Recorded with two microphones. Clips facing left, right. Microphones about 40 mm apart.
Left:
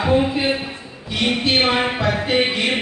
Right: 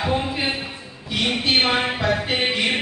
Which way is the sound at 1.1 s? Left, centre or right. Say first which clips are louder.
Left 2 dB; centre.